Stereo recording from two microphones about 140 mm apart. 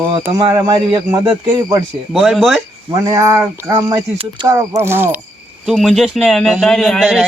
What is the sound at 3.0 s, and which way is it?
Speech, 25° right (ahead or behind).